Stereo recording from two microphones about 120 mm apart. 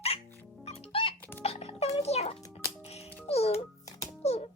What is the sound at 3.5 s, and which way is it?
Music, 25° left (ahead or behind).